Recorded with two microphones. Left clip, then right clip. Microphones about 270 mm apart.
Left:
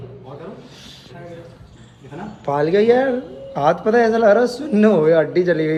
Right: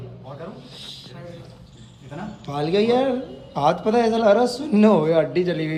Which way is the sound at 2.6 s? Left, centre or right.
Centre.